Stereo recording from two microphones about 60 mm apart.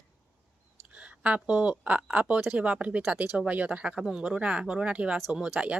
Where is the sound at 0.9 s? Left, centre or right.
Centre.